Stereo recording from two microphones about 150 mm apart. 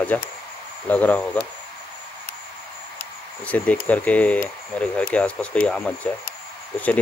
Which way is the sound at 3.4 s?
10° left (ahead or behind).